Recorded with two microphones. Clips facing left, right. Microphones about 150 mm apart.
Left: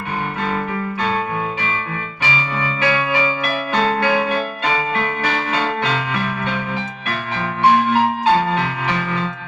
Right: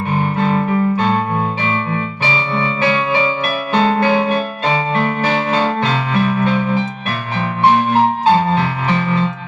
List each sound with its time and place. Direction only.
0.3 s music: 30° right (ahead or behind)
7.9 s music: 30° right (ahead or behind)